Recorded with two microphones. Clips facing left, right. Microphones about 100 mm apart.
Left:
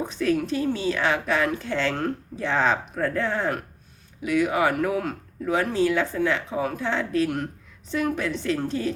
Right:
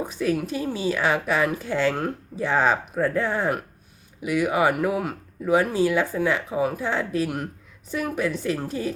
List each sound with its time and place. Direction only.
0.0 s a woman's voice: 5° right (ahead or behind)